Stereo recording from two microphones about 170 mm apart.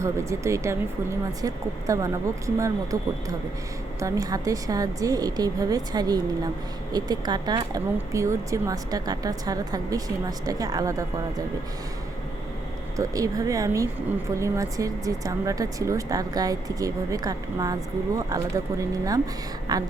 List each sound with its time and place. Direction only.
0.0 s speech: 15° right (ahead or behind)
13.0 s speech: 20° right (ahead or behind)